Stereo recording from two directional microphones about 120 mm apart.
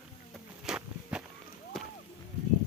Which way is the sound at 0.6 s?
5° right (ahead or behind).